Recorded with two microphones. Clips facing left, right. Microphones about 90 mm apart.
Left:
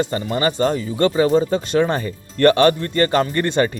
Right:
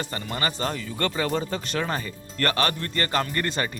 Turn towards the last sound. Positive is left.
turn(degrees=30)  # may be behind; listen again after turning